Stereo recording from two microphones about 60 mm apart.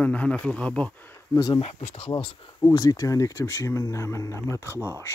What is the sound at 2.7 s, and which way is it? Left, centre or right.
Speech, left.